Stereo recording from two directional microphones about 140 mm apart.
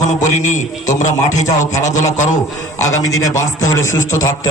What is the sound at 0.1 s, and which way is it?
A man's voice, 60° left (ahead or behind).